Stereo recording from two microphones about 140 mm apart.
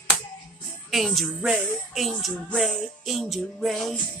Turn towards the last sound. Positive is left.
turn(degrees=0)  # may be behind; listen again after turning